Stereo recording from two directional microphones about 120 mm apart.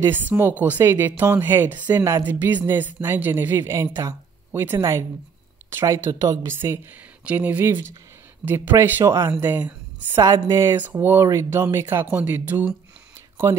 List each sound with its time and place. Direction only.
0.0 s a woman's voice: 15° right (ahead or behind)